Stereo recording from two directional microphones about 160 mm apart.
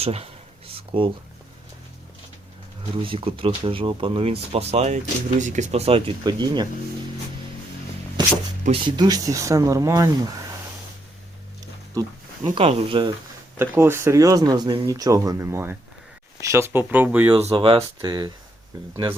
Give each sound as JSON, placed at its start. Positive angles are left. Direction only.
{"t": 0.0, "sound": "speech", "side_deg": -40}
{"t": 0.7, "sound": "a sound", "side_deg": -35}
{"t": 2.9, "sound": "speech", "side_deg": -35}
{"t": 6.2, "sound": "speech", "side_deg": -25}
{"t": 8.2, "sound": "music", "side_deg": -30}
{"t": 8.7, "sound": "speech", "side_deg": -30}
{"t": 12.5, "sound": "speech", "side_deg": -35}
{"t": 13.6, "sound": "speech", "side_deg": -15}
{"t": 17.3, "sound": "speech", "side_deg": -35}